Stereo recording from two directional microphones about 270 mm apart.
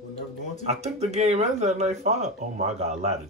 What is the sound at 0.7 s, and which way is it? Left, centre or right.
Speech, right.